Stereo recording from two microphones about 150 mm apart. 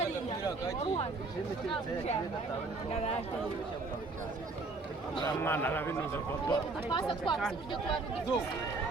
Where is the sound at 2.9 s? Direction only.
45° left (ahead or behind).